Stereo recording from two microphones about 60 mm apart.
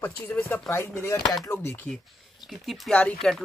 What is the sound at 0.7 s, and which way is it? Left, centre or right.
Speech, left.